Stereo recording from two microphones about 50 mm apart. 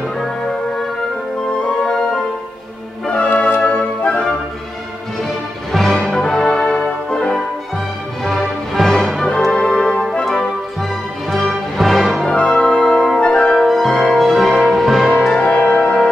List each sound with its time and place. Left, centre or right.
1.6 s music: left
3.1 s music: left
5.7 s music: centre
6.1 s music: centre
8.2 s music: centre
9.5 s music: centre
11.2 s music: centre
12.4 s music: centre
13.6 s music: centre
15.3 s music: left